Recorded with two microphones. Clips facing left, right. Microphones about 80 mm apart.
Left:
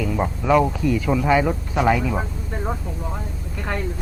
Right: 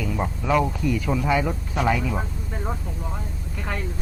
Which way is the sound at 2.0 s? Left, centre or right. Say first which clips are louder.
Left 3 dB; centre.